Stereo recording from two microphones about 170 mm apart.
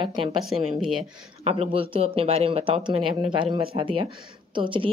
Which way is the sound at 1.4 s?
35° right (ahead or behind).